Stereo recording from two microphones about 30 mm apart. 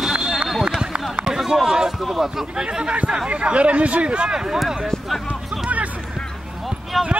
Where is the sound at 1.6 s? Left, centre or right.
Centre.